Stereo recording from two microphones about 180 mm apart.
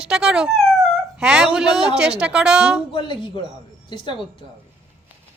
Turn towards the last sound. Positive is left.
turn(degrees=25)  # may be behind; listen again after turning